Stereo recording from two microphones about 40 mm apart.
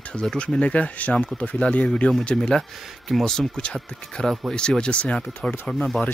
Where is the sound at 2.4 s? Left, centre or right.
Centre.